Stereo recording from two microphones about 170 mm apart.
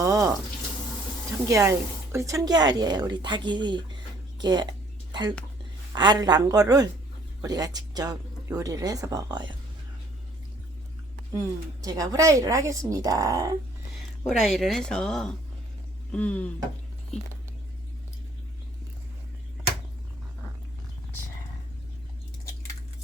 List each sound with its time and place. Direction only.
0.0 s water tap: 20° right (ahead or behind)
1.5 s speech: 20° right (ahead or behind)
11.3 s speech: 20° right (ahead or behind)
14.3 s speech: centre (ahead or behind)